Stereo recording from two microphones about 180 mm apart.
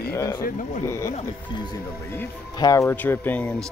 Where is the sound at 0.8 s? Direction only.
15° left (ahead or behind).